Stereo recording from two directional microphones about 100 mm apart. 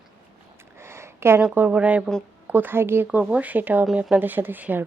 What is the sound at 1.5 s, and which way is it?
Speech, 15° right (ahead or behind).